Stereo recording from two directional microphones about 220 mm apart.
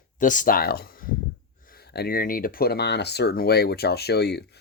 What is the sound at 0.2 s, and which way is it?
Speech, 35° left (ahead or behind).